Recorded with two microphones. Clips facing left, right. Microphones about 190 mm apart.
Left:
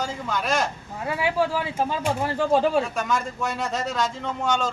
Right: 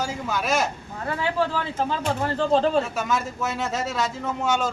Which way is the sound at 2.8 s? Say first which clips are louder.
Even; 5° right (ahead or behind).